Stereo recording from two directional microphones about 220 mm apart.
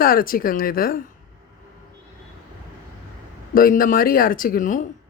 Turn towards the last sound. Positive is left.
turn(degrees=35)  # may be behind; listen again after turning